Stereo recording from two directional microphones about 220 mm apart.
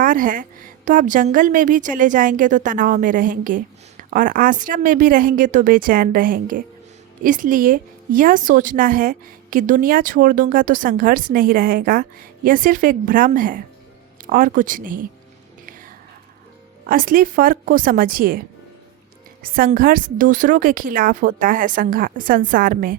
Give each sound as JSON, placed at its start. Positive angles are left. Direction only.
{"t": 0.0, "sound": "a woman's voice", "side_deg": -40}
{"t": 16.8, "sound": "a woman's voice", "side_deg": -40}